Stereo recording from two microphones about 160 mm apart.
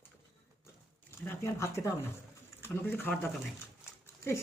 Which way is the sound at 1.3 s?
15° left (ahead or behind).